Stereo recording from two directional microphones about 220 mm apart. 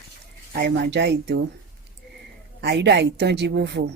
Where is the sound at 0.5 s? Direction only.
50° right (ahead or behind).